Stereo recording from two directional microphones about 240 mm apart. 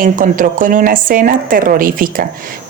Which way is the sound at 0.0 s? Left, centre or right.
Right.